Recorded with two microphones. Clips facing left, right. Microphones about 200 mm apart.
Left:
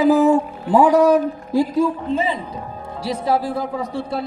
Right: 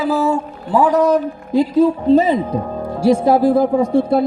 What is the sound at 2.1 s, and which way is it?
Speech, 40° right (ahead or behind).